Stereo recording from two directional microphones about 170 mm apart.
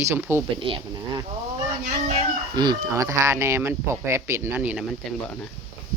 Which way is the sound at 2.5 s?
25° right (ahead or behind).